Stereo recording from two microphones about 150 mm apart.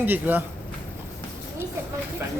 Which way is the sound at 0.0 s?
10° right (ahead or behind).